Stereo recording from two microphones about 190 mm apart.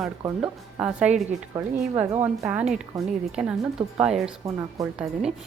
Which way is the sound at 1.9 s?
30° right (ahead or behind).